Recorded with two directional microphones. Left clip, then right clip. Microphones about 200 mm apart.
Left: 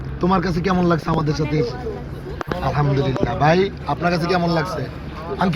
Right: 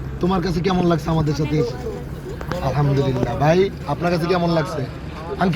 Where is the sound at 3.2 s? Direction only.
40° right (ahead or behind).